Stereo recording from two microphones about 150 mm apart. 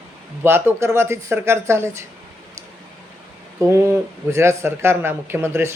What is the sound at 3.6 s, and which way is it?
Speech, 20° right (ahead or behind).